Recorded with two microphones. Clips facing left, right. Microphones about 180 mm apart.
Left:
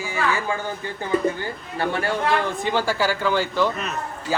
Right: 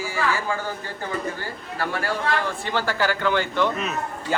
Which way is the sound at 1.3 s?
25° left (ahead or behind).